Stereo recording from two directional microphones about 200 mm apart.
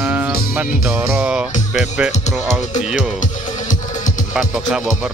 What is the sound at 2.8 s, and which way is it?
Speech, 5° right (ahead or behind).